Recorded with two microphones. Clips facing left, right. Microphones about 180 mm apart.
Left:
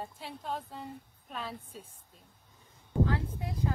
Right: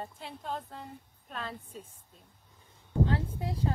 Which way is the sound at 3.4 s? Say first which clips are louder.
Right 2 dB; 30° right (ahead or behind).